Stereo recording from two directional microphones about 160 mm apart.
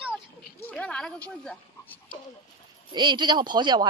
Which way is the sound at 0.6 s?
10° left (ahead or behind).